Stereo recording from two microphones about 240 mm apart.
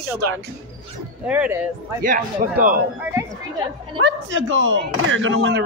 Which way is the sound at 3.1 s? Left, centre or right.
Centre.